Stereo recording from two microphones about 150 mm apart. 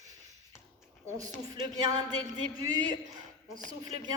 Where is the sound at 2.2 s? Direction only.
25° right (ahead or behind).